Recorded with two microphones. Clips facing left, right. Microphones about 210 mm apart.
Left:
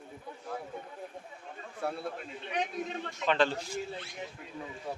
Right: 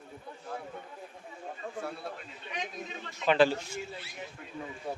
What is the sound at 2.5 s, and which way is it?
Speech, 60° left (ahead or behind).